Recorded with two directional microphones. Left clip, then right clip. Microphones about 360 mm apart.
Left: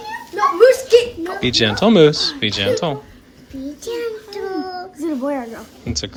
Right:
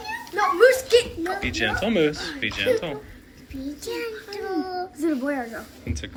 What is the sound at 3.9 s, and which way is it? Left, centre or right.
Child singing, left.